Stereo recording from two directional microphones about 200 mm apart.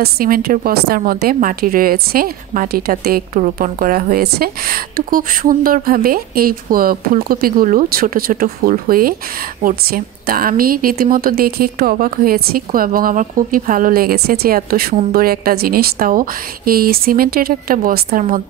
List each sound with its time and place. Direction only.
0.0 s a woman's voice: 45° right (ahead or behind)